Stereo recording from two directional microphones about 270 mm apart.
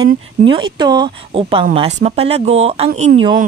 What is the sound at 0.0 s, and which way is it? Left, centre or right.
Speech, centre.